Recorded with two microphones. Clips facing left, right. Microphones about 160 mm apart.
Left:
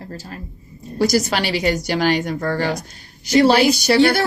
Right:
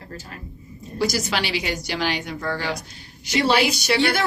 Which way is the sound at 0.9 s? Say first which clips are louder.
Left 6 dB; 45° left (ahead or behind).